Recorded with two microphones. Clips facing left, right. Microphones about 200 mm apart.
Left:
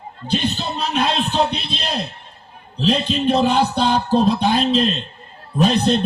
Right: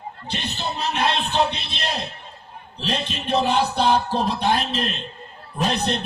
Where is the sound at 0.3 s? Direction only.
65° left (ahead or behind).